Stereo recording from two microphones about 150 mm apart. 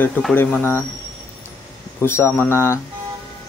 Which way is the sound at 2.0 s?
15° left (ahead or behind).